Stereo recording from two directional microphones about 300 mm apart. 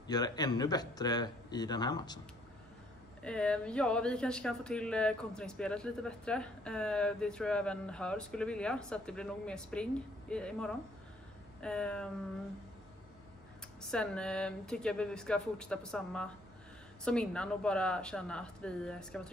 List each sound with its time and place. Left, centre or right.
0.0 s speech: centre
3.2 s speech: centre
13.8 s speech: centre